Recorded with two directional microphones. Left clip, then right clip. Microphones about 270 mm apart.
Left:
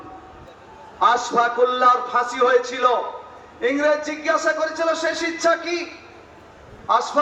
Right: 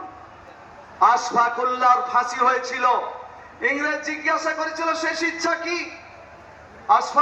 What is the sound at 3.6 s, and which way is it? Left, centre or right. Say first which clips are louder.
A man's voice: left 4 dB; left.